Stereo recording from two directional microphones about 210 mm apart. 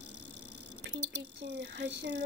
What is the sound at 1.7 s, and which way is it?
Speech, 55° right (ahead or behind).